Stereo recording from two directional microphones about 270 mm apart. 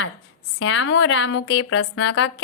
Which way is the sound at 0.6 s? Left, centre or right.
Left.